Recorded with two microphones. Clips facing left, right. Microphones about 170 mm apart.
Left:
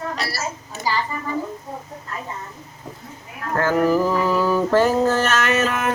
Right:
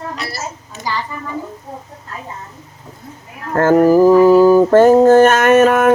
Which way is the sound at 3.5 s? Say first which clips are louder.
Right 8 dB; 45° right (ahead or behind).